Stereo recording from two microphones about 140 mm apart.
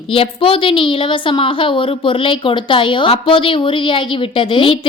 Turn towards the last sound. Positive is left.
turn(degrees=35)  # may be behind; listen again after turning